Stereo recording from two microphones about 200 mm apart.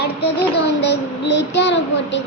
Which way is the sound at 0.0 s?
55° left (ahead or behind).